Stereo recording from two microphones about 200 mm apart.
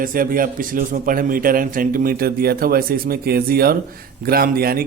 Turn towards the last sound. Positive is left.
turn(degrees=-50)  # may be behind; listen again after turning